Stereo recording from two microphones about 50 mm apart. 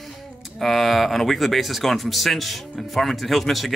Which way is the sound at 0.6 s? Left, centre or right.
Centre.